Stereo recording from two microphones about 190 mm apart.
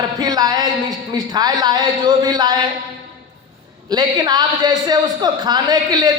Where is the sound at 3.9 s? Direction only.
20° right (ahead or behind).